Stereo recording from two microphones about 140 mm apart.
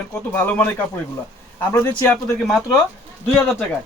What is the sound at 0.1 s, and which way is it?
Speech, 10° left (ahead or behind).